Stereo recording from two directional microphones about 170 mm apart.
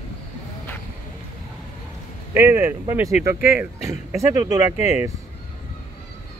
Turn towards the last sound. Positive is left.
turn(degrees=-20)  # may be behind; listen again after turning